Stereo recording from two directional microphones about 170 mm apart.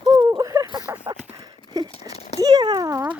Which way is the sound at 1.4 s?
20° right (ahead or behind).